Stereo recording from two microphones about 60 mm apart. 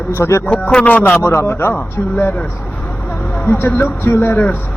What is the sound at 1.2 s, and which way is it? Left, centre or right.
Speech, left.